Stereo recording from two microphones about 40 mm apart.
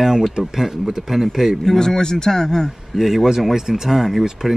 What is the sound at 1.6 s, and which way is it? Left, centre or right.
Speech, centre.